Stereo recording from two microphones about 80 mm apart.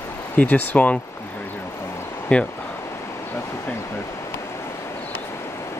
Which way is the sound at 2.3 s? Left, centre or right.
Centre.